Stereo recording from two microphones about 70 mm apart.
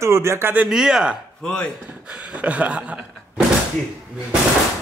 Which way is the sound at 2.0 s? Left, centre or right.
Centre.